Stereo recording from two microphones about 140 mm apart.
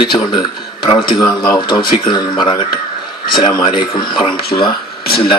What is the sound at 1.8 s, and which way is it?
Speech, 90° left.